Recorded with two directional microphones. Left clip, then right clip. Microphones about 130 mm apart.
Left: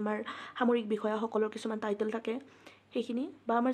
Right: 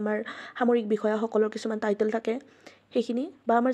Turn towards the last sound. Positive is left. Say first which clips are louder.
# right 7 dB
turn(degrees=-40)  # may be behind; listen again after turning